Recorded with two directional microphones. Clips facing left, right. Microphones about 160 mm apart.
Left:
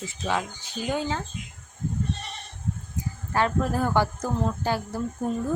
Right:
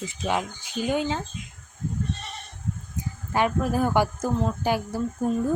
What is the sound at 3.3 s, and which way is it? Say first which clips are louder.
A woman's voice: right 1 dB; 15° right (ahead or behind).